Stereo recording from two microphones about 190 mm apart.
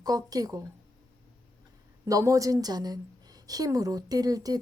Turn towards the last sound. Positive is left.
turn(degrees=-20)  # may be behind; listen again after turning